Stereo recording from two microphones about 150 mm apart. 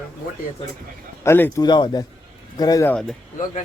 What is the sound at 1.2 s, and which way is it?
Mantra, 20° left (ahead or behind).